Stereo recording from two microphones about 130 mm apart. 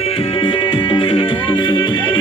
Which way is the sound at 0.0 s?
45° left (ahead or behind).